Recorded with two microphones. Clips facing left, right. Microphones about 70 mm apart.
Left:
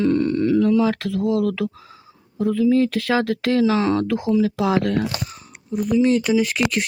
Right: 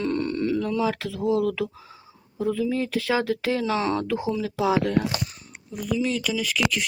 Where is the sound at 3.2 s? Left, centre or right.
Left.